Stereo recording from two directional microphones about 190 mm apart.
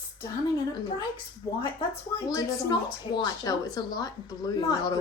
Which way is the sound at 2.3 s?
20° left (ahead or behind).